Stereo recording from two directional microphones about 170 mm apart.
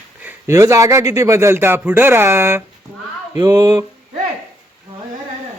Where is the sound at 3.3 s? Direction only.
20° right (ahead or behind).